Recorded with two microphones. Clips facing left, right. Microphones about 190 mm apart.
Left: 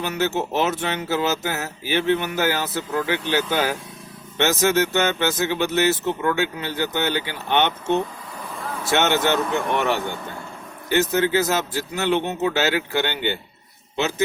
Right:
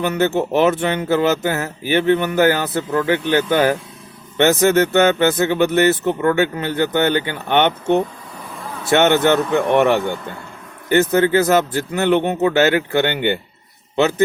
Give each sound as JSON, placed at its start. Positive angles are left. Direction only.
{"t": 0.0, "sound": "a man's voice", "side_deg": -55}